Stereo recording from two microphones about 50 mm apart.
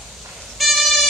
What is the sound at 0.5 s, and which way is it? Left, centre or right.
Vehicle, centre.